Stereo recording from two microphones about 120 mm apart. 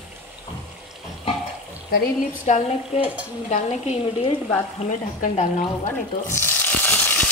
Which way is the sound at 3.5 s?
65° left (ahead or behind).